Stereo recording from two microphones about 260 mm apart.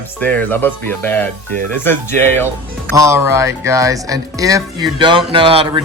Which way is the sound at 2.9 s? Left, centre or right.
Centre.